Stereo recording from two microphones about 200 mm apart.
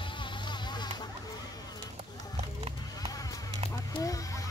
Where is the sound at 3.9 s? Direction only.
15° left (ahead or behind).